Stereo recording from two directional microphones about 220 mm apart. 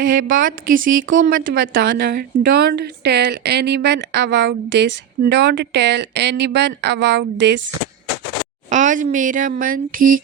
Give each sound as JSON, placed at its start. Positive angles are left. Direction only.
{"t": 0.0, "sound": "a woman's voice", "side_deg": -40}
{"t": 8.7, "sound": "a woman's voice", "side_deg": -35}